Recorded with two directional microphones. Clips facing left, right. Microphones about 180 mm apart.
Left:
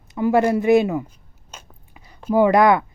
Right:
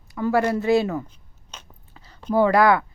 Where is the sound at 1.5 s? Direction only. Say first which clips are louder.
Left 2 dB; 15° left (ahead or behind).